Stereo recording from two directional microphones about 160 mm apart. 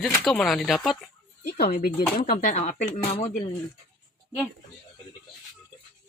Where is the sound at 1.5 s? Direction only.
75° left (ahead or behind); by 3.3 s 45° left (ahead or behind).